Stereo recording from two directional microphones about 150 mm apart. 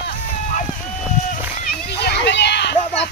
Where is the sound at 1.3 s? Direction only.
75° left (ahead or behind).